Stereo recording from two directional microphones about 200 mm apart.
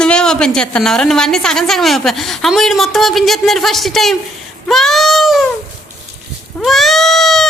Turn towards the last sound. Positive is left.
turn(degrees=0)  # may be behind; listen again after turning